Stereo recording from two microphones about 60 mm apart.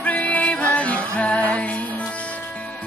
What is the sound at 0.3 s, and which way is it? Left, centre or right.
Music, left.